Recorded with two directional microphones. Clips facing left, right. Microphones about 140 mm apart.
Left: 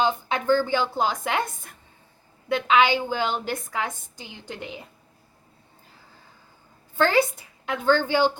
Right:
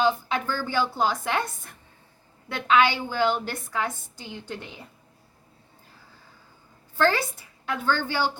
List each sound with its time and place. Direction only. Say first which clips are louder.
0.0 s speech: even; 15° left (ahead or behind)
2.6 s speech: even; 15° left (ahead or behind)
6.9 s a woman's voice: left 3 dB; 15° left (ahead or behind)